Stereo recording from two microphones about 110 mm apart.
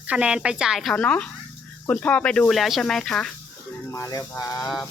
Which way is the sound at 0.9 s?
10° left (ahead or behind).